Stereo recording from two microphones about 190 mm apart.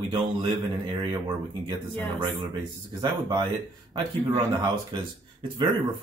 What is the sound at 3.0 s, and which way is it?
Speech, 25° right (ahead or behind).